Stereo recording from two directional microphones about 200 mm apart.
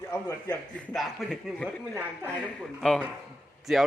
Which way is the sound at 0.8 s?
Centre (ahead or behind).